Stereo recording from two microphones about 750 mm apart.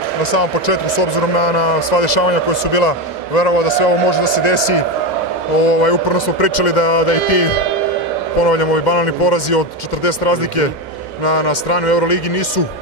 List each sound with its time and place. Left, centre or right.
0.2 s a man's voice: left
8.5 s speech: left